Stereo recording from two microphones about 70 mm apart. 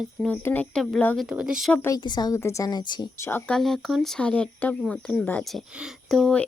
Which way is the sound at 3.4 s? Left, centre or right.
Centre.